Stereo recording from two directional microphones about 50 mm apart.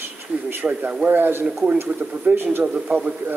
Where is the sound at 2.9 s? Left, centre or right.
Right.